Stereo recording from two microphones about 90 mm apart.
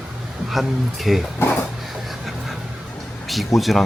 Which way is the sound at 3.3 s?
Centre (ahead or behind).